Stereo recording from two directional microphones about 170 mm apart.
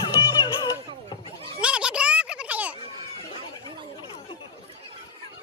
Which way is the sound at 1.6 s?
5° right (ahead or behind).